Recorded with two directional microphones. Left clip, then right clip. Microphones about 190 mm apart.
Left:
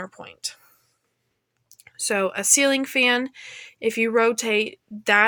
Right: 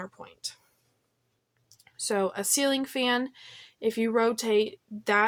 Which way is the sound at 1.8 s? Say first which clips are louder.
Left 5 dB; 25° left (ahead or behind).